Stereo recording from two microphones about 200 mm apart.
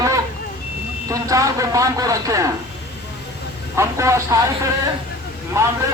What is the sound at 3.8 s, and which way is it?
Speech, 15° right (ahead or behind).